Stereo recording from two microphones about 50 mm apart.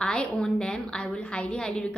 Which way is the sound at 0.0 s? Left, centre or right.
Centre.